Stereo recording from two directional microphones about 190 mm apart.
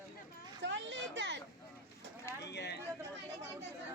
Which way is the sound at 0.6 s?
70° right (ahead or behind).